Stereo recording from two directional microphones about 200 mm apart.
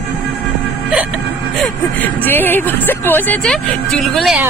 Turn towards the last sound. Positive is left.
turn(degrees=0)  # may be behind; listen again after turning